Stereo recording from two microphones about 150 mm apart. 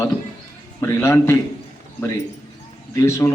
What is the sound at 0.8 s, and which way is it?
Speech, 15° left (ahead or behind).